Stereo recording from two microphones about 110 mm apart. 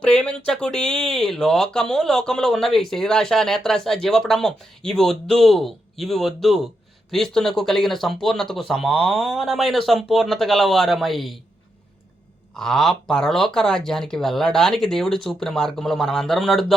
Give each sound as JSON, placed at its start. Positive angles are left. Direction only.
{"t": 0.0, "sound": "speech", "side_deg": 10}
{"t": 12.5, "sound": "speech", "side_deg": 5}